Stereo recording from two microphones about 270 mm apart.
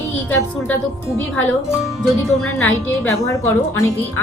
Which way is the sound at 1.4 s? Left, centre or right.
Centre.